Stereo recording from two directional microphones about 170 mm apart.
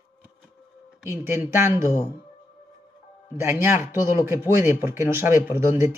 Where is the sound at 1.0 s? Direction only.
15° right (ahead or behind).